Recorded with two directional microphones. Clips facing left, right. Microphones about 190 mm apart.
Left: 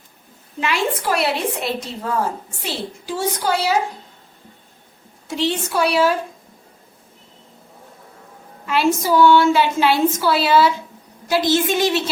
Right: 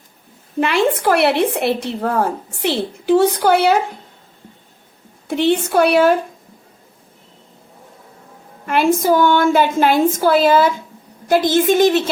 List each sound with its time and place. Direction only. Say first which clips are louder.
0.6 s speech: right 6 dB; 55° right (ahead or behind)
5.3 s speech: right 6 dB; 60° right (ahead or behind)
8.6 s a woman's voice: right 4 dB; 55° right (ahead or behind)